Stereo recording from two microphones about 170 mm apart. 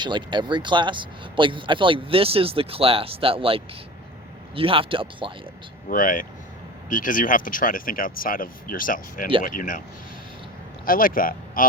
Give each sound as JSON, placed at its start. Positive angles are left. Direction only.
{"t": 0.0, "sound": "speech", "side_deg": -25}
{"t": 5.9, "sound": "speech", "side_deg": 55}
{"t": 10.8, "sound": "speech", "side_deg": 55}